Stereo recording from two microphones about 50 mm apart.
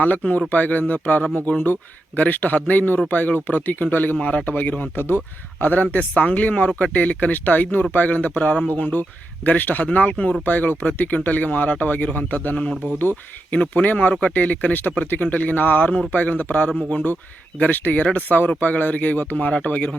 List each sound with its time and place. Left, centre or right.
0.0 s speech: left
4.2 s speech: left
4.5 s speech: left
6.7 s speech: centre
6.9 s speech: left
13.5 s speech: left